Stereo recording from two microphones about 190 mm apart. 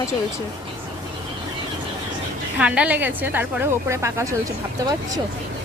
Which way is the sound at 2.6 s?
5° right (ahead or behind).